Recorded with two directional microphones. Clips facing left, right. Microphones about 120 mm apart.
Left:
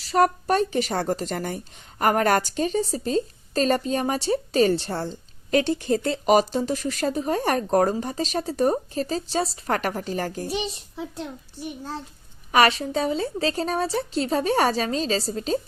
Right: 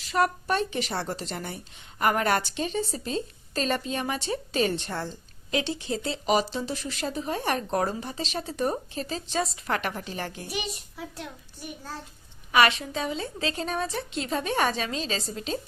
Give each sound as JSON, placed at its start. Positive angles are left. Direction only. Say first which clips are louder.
{"t": 0.0, "sound": "speech", "louder": "left 5 dB", "side_deg": 40}
{"t": 5.5, "sound": "speech", "louder": "left 7 dB", "side_deg": 50}
{"t": 10.4, "sound": "a child's voice", "louder": "left 6 dB", "side_deg": 30}
{"t": 12.5, "sound": "speech", "louder": "left 3 dB", "side_deg": 40}